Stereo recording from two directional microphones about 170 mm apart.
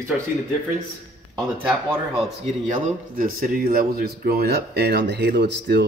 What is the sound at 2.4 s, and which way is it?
A man's voice, 45° right (ahead or behind).